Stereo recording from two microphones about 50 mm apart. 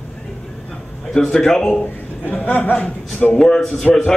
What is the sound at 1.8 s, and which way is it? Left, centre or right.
Speech, left.